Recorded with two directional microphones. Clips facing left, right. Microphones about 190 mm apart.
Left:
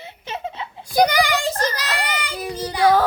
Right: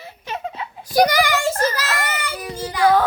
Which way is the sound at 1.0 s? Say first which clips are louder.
Left 1 dB; 15° left (ahead or behind).